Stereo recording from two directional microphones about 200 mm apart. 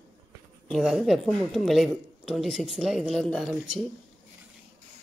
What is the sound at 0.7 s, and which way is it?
A woman's voice, centre (ahead or behind).